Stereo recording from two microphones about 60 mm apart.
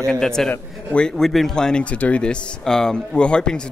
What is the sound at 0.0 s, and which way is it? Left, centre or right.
Speech, centre.